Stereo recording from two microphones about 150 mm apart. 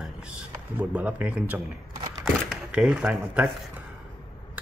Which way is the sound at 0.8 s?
10° right (ahead or behind).